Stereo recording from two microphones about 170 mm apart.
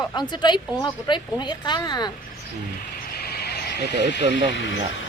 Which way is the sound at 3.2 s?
70° left (ahead or behind).